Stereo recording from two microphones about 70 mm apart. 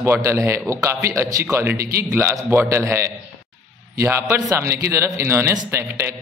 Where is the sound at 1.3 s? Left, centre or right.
Right.